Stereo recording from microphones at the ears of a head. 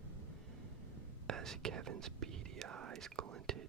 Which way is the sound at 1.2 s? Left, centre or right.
Right.